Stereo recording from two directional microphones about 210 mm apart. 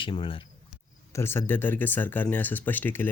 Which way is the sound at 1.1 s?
10° left (ahead or behind).